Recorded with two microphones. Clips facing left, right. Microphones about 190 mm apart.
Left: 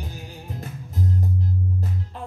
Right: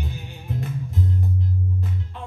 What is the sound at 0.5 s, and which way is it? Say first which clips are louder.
Music: right 5 dB; 40° left (ahead or behind).